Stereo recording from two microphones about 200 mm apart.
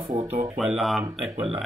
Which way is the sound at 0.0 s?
30° right (ahead or behind).